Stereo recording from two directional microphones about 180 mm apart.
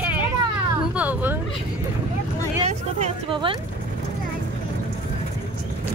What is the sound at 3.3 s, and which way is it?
Speech, 30° right (ahead or behind).